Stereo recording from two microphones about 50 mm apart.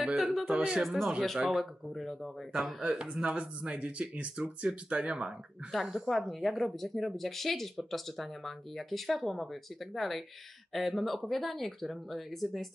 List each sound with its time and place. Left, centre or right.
0.0 s speech: centre
0.5 s speech: centre
0.8 s speech: centre
2.6 s speech: centre
5.7 s speech: centre